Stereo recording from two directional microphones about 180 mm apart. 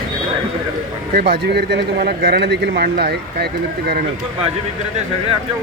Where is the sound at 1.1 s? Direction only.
60° right (ahead or behind).